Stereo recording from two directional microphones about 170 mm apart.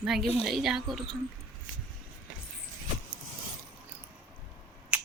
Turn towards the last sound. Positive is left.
turn(degrees=-5)  # may be behind; listen again after turning